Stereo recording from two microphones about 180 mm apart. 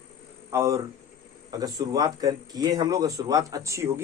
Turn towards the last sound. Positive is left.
turn(degrees=-15)  # may be behind; listen again after turning